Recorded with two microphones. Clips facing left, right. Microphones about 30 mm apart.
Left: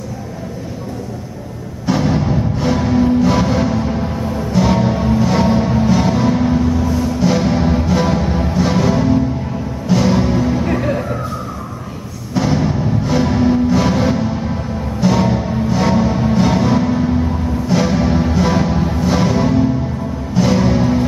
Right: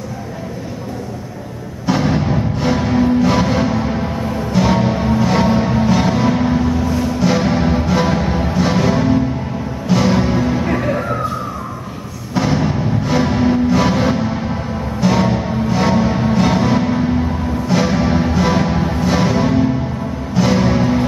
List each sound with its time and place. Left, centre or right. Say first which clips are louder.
1.9 s music: even; centre
12.4 s music: even; centre